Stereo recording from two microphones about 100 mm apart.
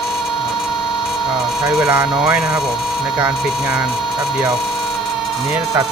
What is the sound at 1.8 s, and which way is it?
Speech, 45° right (ahead or behind).